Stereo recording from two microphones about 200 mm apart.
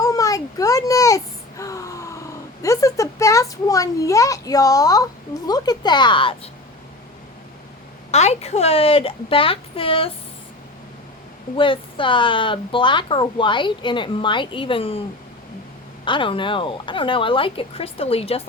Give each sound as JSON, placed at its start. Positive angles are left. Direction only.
{"t": 0.0, "sound": "a child's voice", "side_deg": 15}
{"t": 8.1, "sound": "speech", "side_deg": 35}
{"t": 11.5, "sound": "speech", "side_deg": 25}
{"t": 16.0, "sound": "speech", "side_deg": 25}